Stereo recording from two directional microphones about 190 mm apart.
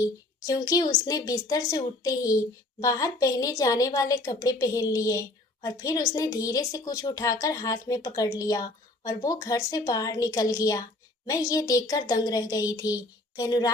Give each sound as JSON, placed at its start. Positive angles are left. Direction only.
{"t": 0.0, "sound": "a woman's voice", "side_deg": 20}